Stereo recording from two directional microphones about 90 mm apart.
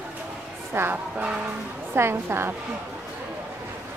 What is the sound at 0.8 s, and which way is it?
Speech, 30° right (ahead or behind).